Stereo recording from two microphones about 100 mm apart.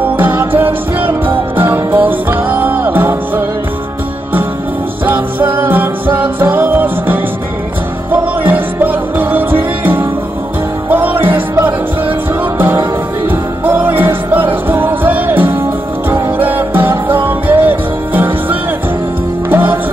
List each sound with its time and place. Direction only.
0.0 s music: 20° right (ahead or behind)
5.0 s music: 20° right (ahead or behind)